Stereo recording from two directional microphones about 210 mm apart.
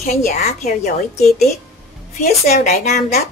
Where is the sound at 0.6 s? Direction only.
45° left (ahead or behind).